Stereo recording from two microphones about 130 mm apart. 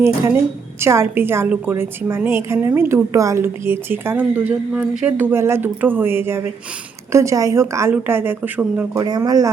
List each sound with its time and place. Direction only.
0.8 s a woman's voice: 20° right (ahead or behind)
9.0 s a woman's voice: 30° right (ahead or behind)